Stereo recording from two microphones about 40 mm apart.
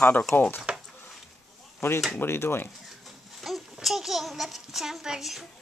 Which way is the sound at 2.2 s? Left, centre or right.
Left.